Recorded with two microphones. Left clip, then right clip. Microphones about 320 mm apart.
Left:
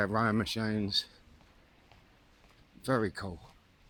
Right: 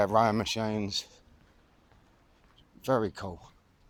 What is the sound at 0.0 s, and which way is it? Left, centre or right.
Speech, centre.